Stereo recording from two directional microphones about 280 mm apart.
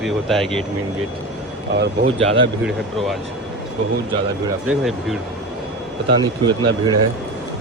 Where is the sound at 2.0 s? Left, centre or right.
Right.